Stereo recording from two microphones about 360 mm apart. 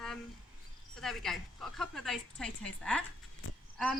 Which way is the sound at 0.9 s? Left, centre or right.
Centre.